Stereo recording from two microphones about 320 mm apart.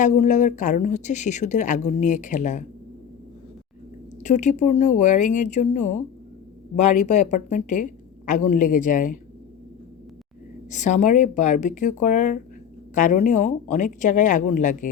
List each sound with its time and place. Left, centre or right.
0.0 s speech: left
4.2 s speech: left
10.7 s speech: left